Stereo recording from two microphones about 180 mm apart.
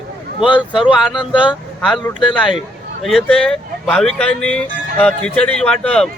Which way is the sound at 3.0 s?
Centre (ahead or behind).